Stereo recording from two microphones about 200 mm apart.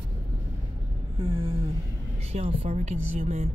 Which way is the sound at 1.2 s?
25° right (ahead or behind).